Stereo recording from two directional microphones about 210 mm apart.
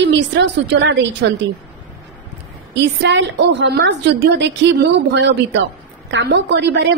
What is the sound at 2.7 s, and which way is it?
A woman's voice, 55° right (ahead or behind).